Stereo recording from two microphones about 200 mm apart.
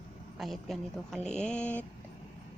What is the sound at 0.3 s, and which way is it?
A woman's voice, centre (ahead or behind).